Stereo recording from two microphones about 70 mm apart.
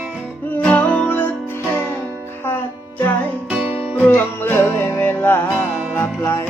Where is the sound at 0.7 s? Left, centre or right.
Centre.